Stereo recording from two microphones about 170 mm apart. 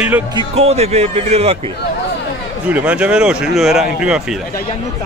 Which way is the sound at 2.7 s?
5° right (ahead or behind).